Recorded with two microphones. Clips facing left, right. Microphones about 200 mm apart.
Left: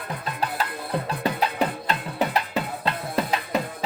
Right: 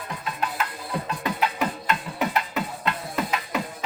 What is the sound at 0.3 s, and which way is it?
Music, 35° left (ahead or behind).